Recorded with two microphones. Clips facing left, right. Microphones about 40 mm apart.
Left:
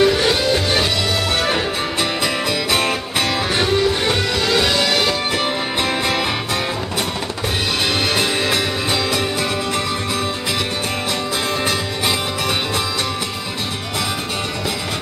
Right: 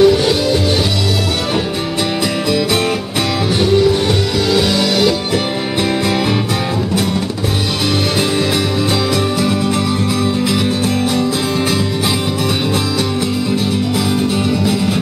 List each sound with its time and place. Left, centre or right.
0.0 s music: centre
3.5 s music: centre